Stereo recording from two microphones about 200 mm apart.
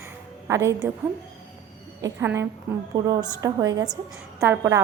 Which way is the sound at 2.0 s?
15° right (ahead or behind).